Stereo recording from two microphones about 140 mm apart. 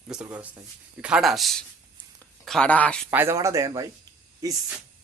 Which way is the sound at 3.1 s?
15° right (ahead or behind).